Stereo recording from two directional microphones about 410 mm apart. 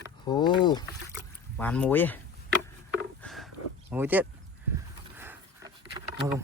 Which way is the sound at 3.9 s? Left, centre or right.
Centre.